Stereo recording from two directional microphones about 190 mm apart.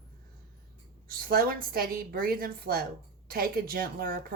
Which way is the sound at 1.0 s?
50° right (ahead or behind).